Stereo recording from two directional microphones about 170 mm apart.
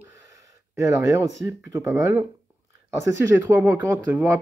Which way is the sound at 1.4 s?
15° right (ahead or behind).